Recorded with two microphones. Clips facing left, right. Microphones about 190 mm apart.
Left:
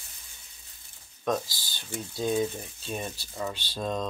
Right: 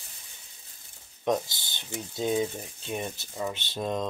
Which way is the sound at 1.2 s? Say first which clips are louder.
Right 2 dB; 20° right (ahead or behind).